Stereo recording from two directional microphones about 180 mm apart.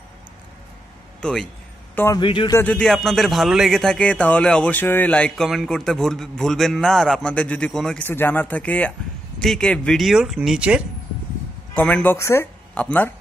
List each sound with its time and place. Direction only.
1.2 s speech: 5° left (ahead or behind)
2.0 s a man's voice: 15° left (ahead or behind)
2.2 s speech: 30° left (ahead or behind)
2.5 s speech: 10° left (ahead or behind)
11.7 s speech: 5° left (ahead or behind)